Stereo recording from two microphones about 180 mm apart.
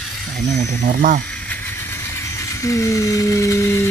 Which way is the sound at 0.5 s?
50° right (ahead or behind).